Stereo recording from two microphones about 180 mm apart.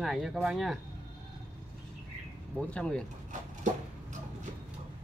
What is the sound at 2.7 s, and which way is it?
Speech, 5° left (ahead or behind).